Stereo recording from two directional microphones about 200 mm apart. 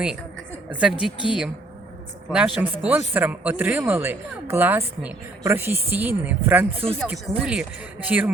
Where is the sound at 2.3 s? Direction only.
5° right (ahead or behind).